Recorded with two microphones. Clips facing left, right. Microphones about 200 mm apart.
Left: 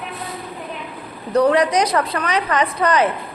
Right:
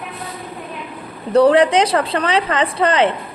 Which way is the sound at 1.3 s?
30° right (ahead or behind).